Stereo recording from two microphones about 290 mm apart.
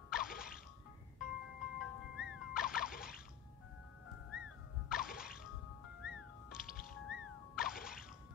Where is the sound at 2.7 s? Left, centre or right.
Centre.